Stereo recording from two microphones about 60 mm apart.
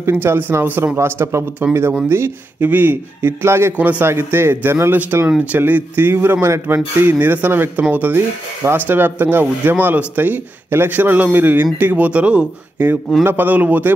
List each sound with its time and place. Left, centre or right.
0.1 s a man's voice: right
2.6 s speech: right
3.7 s speech: right
4.0 s a man's voice: right
12.1 s speech: centre